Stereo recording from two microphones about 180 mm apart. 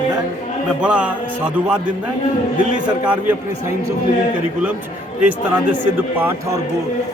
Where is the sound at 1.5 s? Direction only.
5° right (ahead or behind).